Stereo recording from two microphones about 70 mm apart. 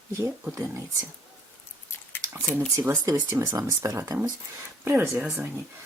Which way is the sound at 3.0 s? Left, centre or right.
Right.